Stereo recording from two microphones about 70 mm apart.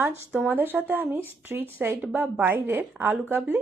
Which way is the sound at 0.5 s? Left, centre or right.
Right.